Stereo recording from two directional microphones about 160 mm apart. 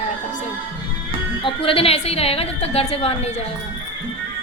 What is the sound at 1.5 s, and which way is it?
A woman's voice, 35° left (ahead or behind).